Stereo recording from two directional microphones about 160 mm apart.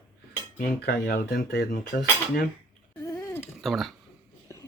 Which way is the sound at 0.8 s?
70° left (ahead or behind).